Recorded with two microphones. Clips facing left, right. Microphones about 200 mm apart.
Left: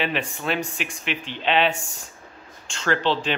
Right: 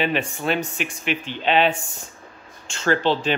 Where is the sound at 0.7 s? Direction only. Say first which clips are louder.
Right 4 dB; centre (ahead or behind).